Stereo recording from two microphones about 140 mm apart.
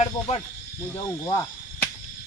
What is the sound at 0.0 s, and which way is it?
Speech, 45° left (ahead or behind).